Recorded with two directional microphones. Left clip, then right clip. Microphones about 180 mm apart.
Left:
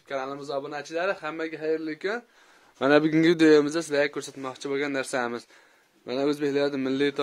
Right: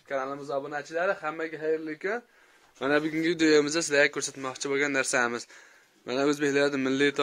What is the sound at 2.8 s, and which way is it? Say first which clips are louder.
Speech: left 6 dB; 55° left (ahead or behind).